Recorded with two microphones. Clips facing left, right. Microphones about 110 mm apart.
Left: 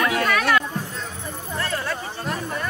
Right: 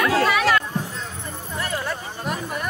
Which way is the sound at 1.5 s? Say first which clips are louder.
Even; 15° right (ahead or behind).